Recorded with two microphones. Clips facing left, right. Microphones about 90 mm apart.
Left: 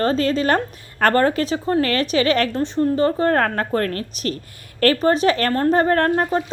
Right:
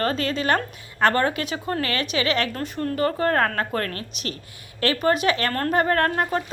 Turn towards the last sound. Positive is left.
turn(degrees=30)  # may be behind; listen again after turning